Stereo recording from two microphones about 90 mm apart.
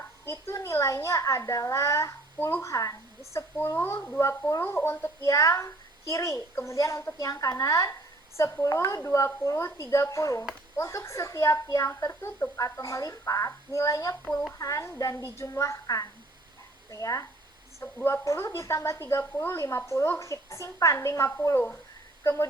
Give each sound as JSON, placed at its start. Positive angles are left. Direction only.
{"t": 0.3, "sound": "a child's voice", "side_deg": 30}